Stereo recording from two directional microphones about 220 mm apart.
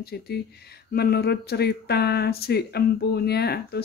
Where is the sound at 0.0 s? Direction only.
45° left (ahead or behind).